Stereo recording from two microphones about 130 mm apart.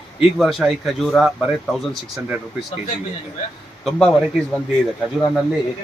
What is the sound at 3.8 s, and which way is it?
Speech, 5° left (ahead or behind).